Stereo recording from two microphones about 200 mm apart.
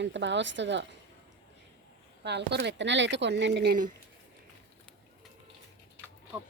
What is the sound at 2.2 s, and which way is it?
Speech, 60° right (ahead or behind).